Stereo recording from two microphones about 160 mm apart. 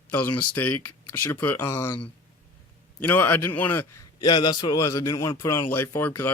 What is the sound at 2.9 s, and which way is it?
Speech, 10° left (ahead or behind).